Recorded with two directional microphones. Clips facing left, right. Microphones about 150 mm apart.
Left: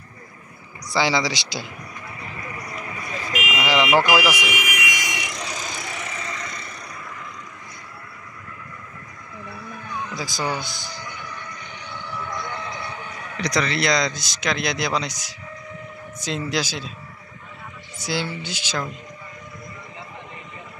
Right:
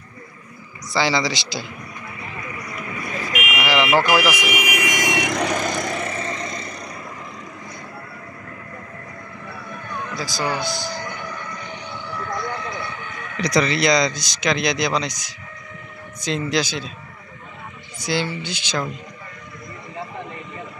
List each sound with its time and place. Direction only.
0.8 s a man's voice: 15° left (ahead or behind)
3.3 s car alarm: 30° left (ahead or behind)
3.6 s speech: 15° left (ahead or behind)
4.4 s speech: 15° right (ahead or behind)
4.6 s vehicle: 40° right (ahead or behind)
6.1 s vehicle: 30° right (ahead or behind)
10.4 s music: 60° right (ahead or behind)
12.8 s a sound: 35° left (ahead or behind)
13.4 s a man's voice: 5° right (ahead or behind)
17.9 s a man's voice: 10° left (ahead or behind)